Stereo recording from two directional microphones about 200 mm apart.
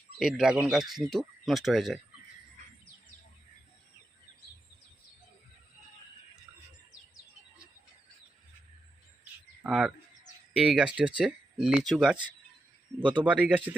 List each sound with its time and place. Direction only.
0.2 s speech: 5° right (ahead or behind)
9.6 s speech: 5° right (ahead or behind)